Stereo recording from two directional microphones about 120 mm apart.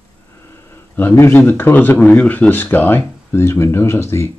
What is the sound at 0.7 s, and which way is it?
A man's voice, 20° left (ahead or behind).